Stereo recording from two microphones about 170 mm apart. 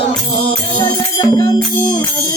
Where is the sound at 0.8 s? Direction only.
15° left (ahead or behind).